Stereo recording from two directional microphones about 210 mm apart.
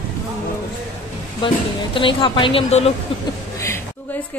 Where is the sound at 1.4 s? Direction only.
25° left (ahead or behind).